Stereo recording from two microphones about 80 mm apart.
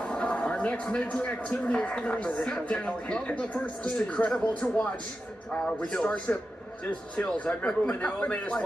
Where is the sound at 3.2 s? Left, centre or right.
Centre.